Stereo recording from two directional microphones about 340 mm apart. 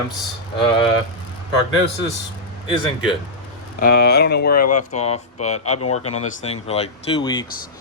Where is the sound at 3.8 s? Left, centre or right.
Left.